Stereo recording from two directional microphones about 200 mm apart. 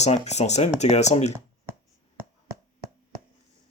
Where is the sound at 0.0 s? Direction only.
35° left (ahead or behind).